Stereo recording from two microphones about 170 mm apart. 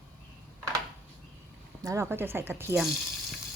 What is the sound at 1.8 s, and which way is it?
Speech, 20° right (ahead or behind).